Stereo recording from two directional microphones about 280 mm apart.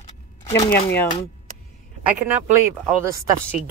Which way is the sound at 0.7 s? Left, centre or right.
Centre.